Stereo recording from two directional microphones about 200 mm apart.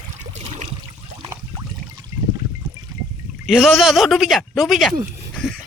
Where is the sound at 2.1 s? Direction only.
15° right (ahead or behind).